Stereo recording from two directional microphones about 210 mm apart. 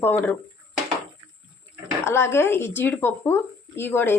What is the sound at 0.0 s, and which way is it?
Speech, 10° left (ahead or behind).